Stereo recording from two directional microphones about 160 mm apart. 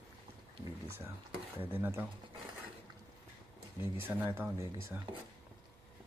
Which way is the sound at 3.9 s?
15° right (ahead or behind).